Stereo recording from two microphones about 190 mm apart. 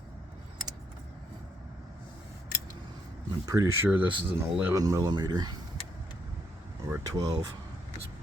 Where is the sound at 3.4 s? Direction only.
20° right (ahead or behind).